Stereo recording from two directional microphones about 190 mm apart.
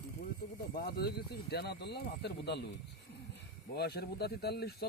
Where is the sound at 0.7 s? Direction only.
55° left (ahead or behind).